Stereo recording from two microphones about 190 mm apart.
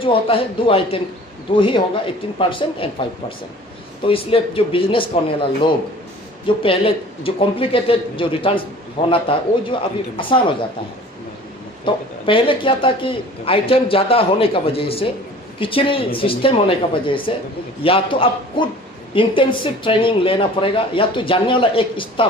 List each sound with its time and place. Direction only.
0.0 s speech: 30° left (ahead or behind)
6.6 s speech: 30° left (ahead or behind)
11.9 s speech: 25° left (ahead or behind)